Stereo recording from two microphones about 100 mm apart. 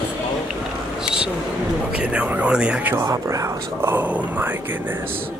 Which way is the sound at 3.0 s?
35° right (ahead or behind).